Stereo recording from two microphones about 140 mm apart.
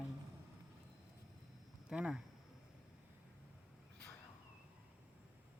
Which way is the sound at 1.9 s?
5° right (ahead or behind).